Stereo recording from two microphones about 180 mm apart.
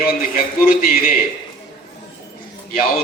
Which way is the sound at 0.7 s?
55° left (ahead or behind).